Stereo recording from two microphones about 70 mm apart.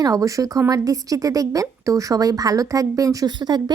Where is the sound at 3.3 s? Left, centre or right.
Right.